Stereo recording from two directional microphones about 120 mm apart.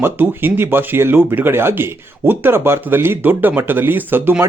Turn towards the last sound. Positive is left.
turn(degrees=-20)  # may be behind; listen again after turning